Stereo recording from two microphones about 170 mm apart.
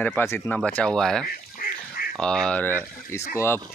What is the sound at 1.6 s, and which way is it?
Duck, 60° left (ahead or behind).